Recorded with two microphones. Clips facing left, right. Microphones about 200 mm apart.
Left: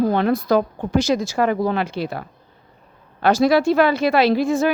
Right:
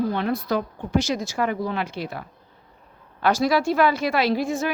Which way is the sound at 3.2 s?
25° left (ahead or behind).